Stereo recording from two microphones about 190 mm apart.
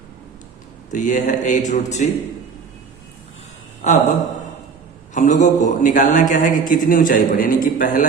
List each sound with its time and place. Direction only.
0.9 s a man's voice: 40° left (ahead or behind)
3.8 s a man's voice: 40° left (ahead or behind)
5.1 s a man's voice: 40° left (ahead or behind)